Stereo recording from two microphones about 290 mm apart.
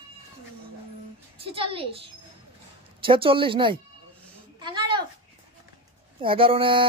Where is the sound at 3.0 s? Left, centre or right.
Centre.